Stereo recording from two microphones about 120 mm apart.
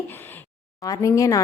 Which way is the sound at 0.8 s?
30° left (ahead or behind).